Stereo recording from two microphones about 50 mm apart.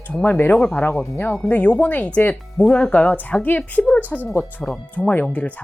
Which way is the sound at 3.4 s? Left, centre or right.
Left.